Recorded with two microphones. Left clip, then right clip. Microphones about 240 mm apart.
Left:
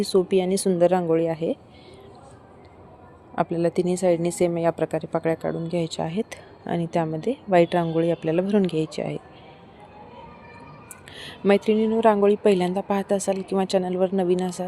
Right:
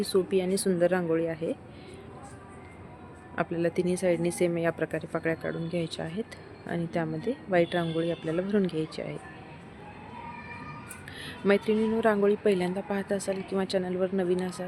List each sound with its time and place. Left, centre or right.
0.0 s a woman's voice: left
3.3 s a woman's voice: left
11.1 s a woman's voice: left